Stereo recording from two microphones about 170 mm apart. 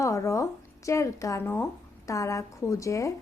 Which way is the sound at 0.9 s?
20° left (ahead or behind).